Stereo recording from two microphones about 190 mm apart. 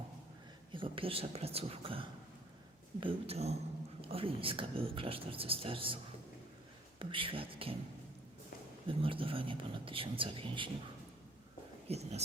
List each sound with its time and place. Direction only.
0.7 s speech: 25° right (ahead or behind)
7.0 s speech: 25° right (ahead or behind)
8.9 s speech: 30° right (ahead or behind)
11.9 s speech: 35° right (ahead or behind)